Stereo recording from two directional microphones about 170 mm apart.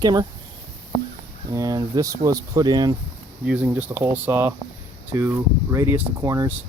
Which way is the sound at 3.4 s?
10° right (ahead or behind).